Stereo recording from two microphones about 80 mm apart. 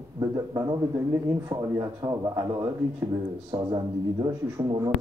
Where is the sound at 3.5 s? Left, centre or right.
Right.